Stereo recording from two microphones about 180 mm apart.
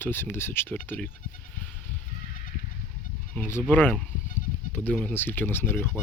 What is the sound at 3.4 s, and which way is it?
Speech, 15° left (ahead or behind).